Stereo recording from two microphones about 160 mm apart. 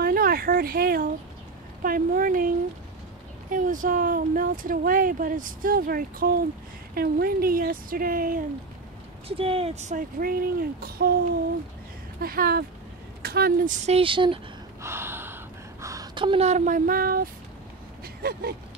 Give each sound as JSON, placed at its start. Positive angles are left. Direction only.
{"t": 0.0, "sound": "speech", "side_deg": -65}
{"t": 9.4, "sound": "speech", "side_deg": -35}
{"t": 12.2, "sound": "speech", "side_deg": -70}
{"t": 13.7, "sound": "speech", "side_deg": -40}
{"t": 14.8, "sound": "gasp", "side_deg": -15}
{"t": 18.0, "sound": "a sound", "side_deg": -75}